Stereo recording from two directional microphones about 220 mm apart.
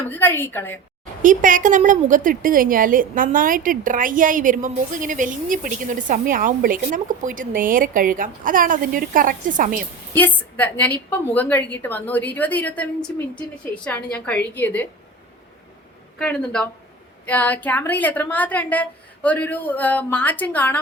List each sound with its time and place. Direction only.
0.1 s a woman's voice: 10° left (ahead or behind)
1.2 s a woman's voice: 35° right (ahead or behind)
10.2 s a woman's voice: 10° left (ahead or behind)
16.1 s a woman's voice: 5° left (ahead or behind)